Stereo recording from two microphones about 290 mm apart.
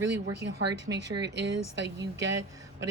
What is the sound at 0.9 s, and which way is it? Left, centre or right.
Speech, right.